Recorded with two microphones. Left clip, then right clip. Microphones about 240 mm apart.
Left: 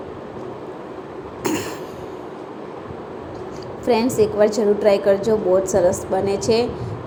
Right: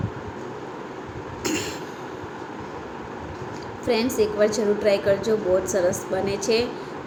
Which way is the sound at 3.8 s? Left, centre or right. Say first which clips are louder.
Left 5 dB; centre.